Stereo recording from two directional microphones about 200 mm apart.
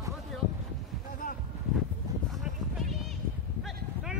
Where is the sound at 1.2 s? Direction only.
40° left (ahead or behind).